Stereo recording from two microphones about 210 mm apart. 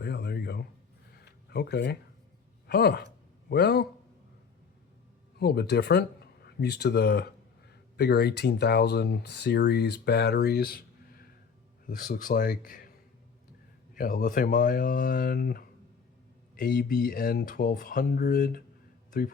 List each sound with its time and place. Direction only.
0.0 s a sound: 50° left (ahead or behind)
1.5 s speech: 50° left (ahead or behind)
5.4 s a man's voice: 50° left (ahead or behind)
13.9 s speech: 40° left (ahead or behind)